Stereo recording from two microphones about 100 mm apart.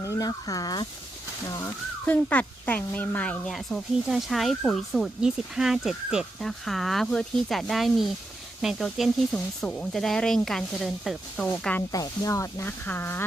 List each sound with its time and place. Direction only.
0.0 s speech: 35° left (ahead or behind)
1.6 s speech: 15° left (ahead or behind)
3.5 s speech: centre (ahead or behind)
11.4 s speech: 15° left (ahead or behind)
11.9 s speech: 35° left (ahead or behind)
12.6 s speech: 20° left (ahead or behind)